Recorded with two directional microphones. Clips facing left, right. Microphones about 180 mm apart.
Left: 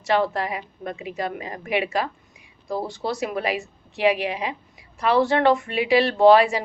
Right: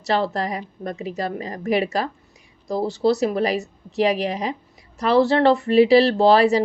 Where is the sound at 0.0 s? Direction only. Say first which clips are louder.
Even; 35° right (ahead or behind).